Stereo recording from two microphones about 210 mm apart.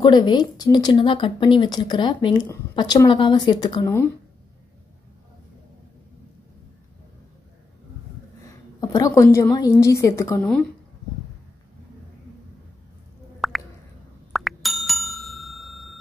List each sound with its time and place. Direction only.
0.0 s speech: 20° left (ahead or behind)
8.8 s a woman's voice: 15° left (ahead or behind)
13.4 s plop: centre (ahead or behind)
14.3 s bicycle bell: centre (ahead or behind)